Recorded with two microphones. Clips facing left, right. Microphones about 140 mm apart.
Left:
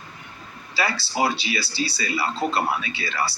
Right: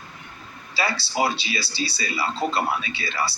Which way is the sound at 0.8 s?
25° right (ahead or behind).